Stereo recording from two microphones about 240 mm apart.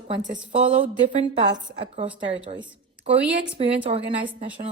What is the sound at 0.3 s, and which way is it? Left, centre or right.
Speech, right.